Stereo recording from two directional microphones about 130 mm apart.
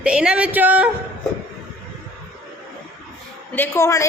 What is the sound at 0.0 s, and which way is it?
Speech, 10° right (ahead or behind).